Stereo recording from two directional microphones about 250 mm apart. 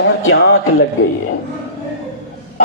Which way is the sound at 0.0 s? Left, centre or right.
Left.